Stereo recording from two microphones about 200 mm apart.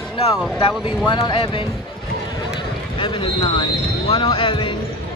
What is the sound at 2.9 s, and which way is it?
Speech, 25° left (ahead or behind).